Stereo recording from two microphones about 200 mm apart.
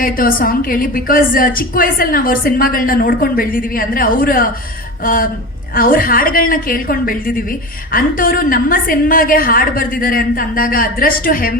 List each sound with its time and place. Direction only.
0.0 s a woman's voice: 45° left (ahead or behind)